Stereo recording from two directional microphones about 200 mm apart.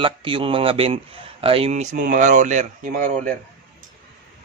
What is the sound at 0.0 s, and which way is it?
A man's voice, 25° right (ahead or behind).